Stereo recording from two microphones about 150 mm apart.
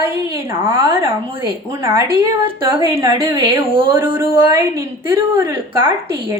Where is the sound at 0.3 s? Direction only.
15° right (ahead or behind).